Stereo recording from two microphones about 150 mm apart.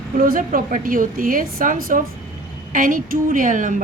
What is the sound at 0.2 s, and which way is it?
A woman's voice, 70° right (ahead or behind).